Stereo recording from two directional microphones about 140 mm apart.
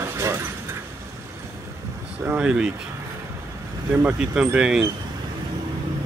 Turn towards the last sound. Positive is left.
turn(degrees=-5)  # may be behind; listen again after turning